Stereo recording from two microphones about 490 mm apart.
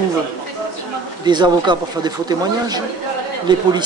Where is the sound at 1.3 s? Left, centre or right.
Centre.